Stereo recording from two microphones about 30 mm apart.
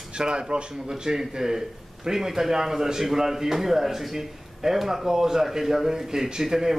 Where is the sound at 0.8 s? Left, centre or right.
Centre.